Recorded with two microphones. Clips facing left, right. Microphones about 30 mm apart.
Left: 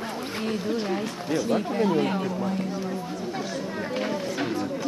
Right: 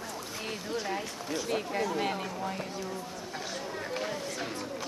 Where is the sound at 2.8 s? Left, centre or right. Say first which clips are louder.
Left 7 dB; left.